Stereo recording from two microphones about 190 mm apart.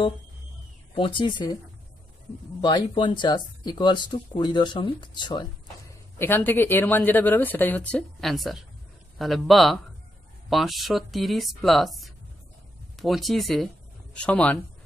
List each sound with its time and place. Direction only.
0.9 s speech: 25° left (ahead or behind)
2.6 s speech: 25° left (ahead or behind)
6.1 s speech: 10° left (ahead or behind)